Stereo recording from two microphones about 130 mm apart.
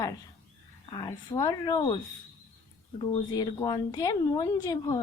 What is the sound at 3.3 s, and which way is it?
A woman's voice, 30° left (ahead or behind).